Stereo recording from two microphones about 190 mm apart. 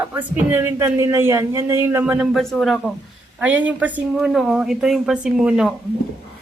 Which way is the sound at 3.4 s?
10° right (ahead or behind).